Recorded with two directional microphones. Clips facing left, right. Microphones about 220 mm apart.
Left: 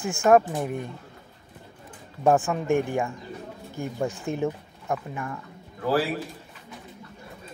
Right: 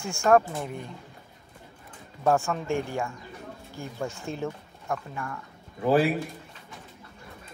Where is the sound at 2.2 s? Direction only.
15° left (ahead or behind).